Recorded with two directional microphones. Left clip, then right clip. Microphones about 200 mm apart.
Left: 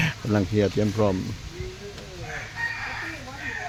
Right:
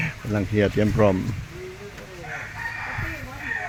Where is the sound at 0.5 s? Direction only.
Centre (ahead or behind).